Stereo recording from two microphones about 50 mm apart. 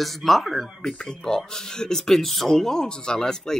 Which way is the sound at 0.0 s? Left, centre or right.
Centre.